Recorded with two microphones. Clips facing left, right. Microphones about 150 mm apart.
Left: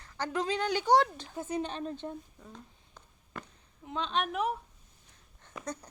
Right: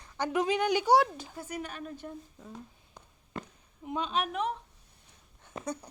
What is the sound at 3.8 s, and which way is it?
Speech, 10° right (ahead or behind).